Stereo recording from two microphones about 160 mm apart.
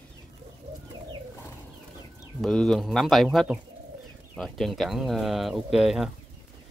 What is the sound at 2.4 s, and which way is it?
Speech, centre (ahead or behind).